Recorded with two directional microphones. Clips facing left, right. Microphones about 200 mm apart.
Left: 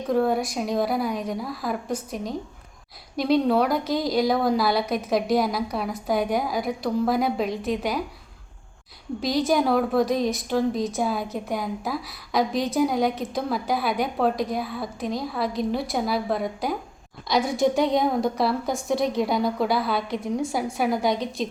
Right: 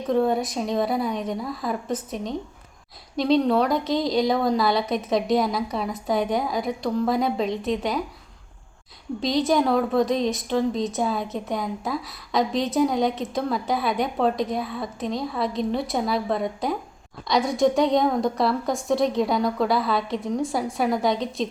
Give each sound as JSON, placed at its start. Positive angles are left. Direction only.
{"t": 0.1, "sound": "a woman's voice", "side_deg": 5}
{"t": 9.2, "sound": "a woman's voice", "side_deg": 5}